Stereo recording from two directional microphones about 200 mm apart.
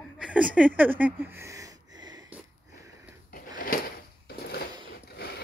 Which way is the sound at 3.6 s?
45° left (ahead or behind).